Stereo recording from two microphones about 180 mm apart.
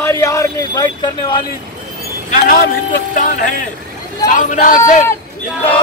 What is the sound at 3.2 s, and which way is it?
Speech, 50° left (ahead or behind).